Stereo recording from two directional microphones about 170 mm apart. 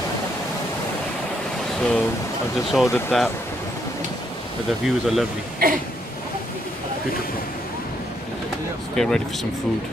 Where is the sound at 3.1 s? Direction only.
Centre (ahead or behind).